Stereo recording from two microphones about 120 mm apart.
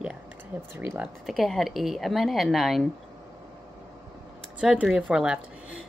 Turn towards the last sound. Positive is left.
turn(degrees=-5)  # may be behind; listen again after turning